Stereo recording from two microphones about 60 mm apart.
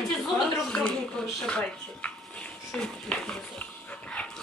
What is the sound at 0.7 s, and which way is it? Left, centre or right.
Speech, centre.